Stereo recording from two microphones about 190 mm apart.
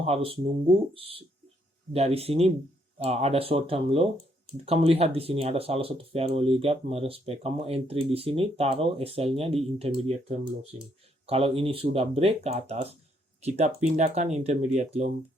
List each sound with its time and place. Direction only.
0.0 s speech: 30° right (ahead or behind)